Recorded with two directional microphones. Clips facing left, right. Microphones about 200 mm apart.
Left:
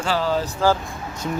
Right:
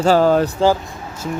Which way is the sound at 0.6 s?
10° right (ahead or behind).